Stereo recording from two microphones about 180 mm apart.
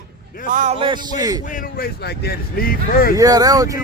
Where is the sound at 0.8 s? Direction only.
20° right (ahead or behind).